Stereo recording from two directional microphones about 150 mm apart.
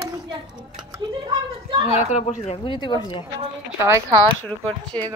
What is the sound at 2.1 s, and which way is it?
Speech, 50° left (ahead or behind).